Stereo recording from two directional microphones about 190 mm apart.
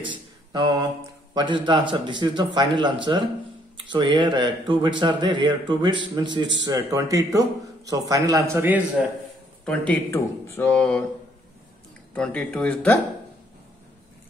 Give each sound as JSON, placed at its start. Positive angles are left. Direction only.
{"t": 0.1, "sound": "a sound", "side_deg": -20}
{"t": 1.3, "sound": "a man's voice", "side_deg": -25}
{"t": 9.7, "sound": "speech", "side_deg": 10}
{"t": 12.1, "sound": "speech", "side_deg": 5}